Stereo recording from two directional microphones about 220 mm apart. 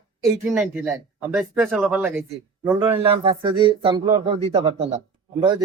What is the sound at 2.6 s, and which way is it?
Speech, 20° right (ahead or behind).